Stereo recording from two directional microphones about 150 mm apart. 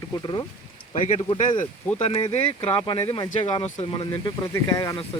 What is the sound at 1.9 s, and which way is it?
Speech, 40° left (ahead or behind).